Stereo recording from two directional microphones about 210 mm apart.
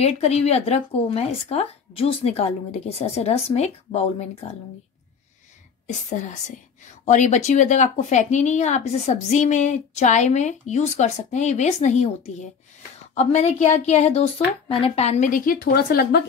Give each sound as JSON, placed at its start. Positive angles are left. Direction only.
{"t": 0.0, "sound": "a woman's voice", "side_deg": 30}
{"t": 5.9, "sound": "a woman's voice", "side_deg": 35}